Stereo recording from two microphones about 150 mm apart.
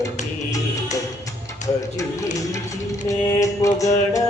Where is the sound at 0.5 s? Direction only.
20° left (ahead or behind).